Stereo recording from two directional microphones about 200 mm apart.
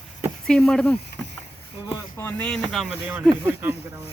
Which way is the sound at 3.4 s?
10° right (ahead or behind).